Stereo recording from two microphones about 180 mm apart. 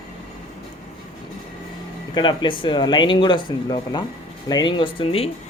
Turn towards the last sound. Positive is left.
turn(degrees=30)  # may be behind; listen again after turning